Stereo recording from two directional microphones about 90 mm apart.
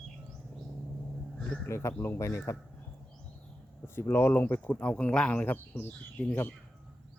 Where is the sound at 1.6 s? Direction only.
30° left (ahead or behind).